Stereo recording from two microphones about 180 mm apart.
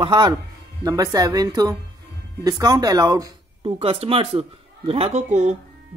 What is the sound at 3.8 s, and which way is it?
Speech, 35° right (ahead or behind).